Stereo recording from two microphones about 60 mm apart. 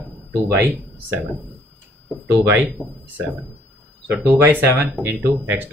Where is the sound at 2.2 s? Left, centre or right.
Right.